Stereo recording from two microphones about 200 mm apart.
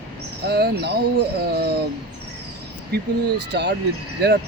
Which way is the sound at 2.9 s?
55° right (ahead or behind).